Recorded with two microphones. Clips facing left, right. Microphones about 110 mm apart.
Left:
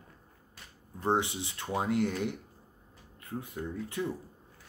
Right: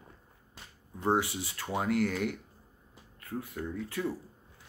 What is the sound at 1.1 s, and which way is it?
Speech, 25° left (ahead or behind).